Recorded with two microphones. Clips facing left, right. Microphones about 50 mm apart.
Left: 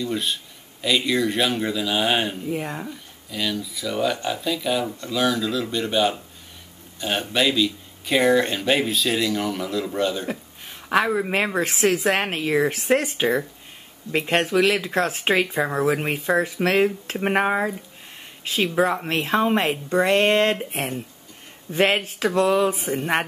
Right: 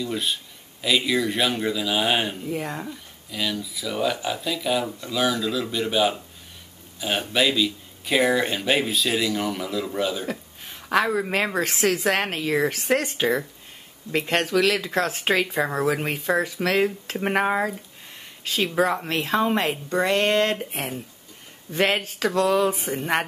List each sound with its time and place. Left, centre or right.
0.0 s speech: centre
10.9 s a woman's voice: centre
17.2 s a woman's voice: centre
21.6 s speech: centre
22.7 s speech: centre